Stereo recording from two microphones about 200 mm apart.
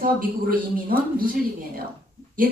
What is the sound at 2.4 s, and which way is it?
Speech, 45° right (ahead or behind).